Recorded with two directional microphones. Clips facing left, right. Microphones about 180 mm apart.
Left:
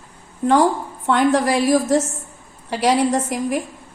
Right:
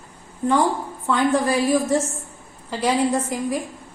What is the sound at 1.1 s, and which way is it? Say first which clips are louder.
Speech: left 3 dB; 80° left.